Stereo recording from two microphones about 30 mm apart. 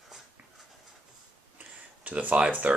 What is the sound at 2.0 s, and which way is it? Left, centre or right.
Speech, right.